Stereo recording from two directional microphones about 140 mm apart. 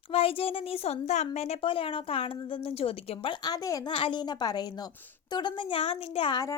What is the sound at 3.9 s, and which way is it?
A child's voice, 35° left (ahead or behind).